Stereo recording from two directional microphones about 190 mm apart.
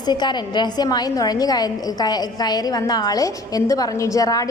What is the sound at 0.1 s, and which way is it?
A woman's voice, 25° left (ahead or behind).